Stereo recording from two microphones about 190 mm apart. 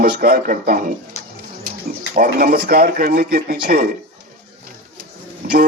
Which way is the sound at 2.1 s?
50° right (ahead or behind).